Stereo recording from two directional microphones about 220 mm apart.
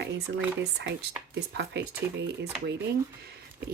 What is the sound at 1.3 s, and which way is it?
Speech, 50° right (ahead or behind).